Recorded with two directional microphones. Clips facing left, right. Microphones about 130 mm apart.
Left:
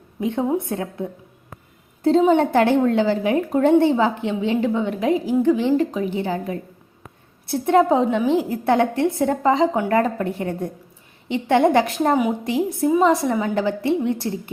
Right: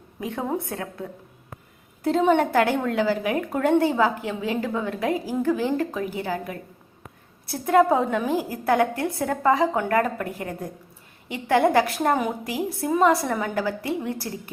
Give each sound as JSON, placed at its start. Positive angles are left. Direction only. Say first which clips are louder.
{"t": 0.2, "sound": "a woman's voice", "louder": "left 6 dB", "side_deg": 25}
{"t": 2.4, "sound": "a woman's voice", "louder": "left 4 dB", "side_deg": 25}